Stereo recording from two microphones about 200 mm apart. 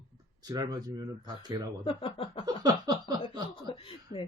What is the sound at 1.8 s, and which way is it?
Speech, 30° left (ahead or behind).